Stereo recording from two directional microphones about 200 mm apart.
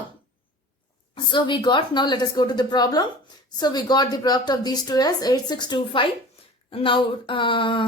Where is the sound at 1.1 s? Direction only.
25° left (ahead or behind).